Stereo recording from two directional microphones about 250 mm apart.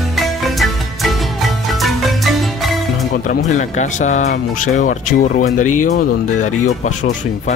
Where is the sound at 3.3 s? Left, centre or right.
Left.